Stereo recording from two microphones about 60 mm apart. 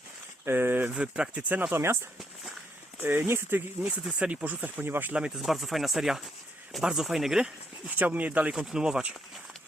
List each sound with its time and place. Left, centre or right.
0.4 s speech: right
0.9 s speech: centre
1.7 s speech: right
3.0 s speech: right
3.8 s speech: right
5.4 s speech: centre
7.9 s speech: right
8.5 s speech: centre